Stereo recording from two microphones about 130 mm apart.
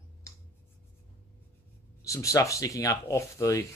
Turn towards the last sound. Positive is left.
turn(degrees=25)  # may be behind; listen again after turning